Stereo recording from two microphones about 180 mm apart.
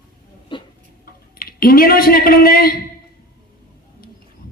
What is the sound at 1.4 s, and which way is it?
Speech, 55° left (ahead or behind).